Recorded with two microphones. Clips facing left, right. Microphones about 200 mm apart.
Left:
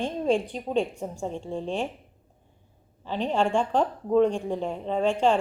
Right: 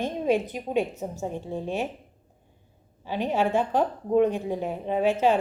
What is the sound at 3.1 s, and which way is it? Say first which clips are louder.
A woman's voice: even; 10° right (ahead or behind).